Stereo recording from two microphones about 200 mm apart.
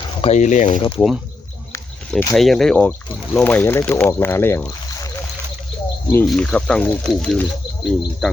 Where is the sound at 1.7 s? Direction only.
5° left (ahead or behind).